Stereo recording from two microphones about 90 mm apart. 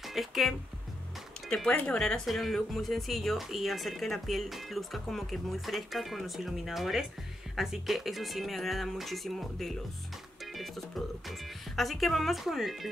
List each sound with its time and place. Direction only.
0.0 s speech: centre (ahead or behind)
10.4 s music: centre (ahead or behind)
11.2 s speech: centre (ahead or behind)